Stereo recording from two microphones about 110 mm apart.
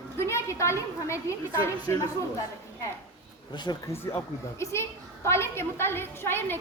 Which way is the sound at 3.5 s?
45° left (ahead or behind).